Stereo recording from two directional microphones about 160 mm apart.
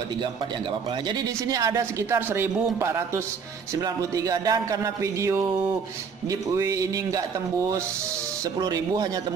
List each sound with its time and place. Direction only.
1.5 s speech: 20° right (ahead or behind)
6.5 s speech: 20° right (ahead or behind)